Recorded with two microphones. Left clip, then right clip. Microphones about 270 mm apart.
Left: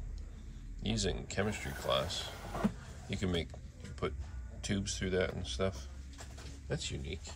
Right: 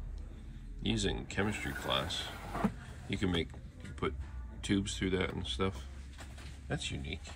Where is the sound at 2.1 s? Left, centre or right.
Centre.